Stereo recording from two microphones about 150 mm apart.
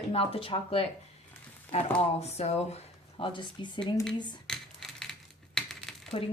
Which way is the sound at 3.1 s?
35° left (ahead or behind).